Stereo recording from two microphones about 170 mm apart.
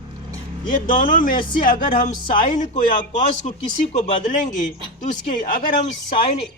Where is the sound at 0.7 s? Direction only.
55° left (ahead or behind).